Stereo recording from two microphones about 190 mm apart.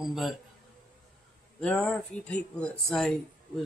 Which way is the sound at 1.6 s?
5° left (ahead or behind).